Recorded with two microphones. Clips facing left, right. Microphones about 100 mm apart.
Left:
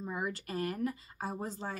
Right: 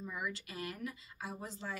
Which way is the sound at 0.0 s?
40° left (ahead or behind).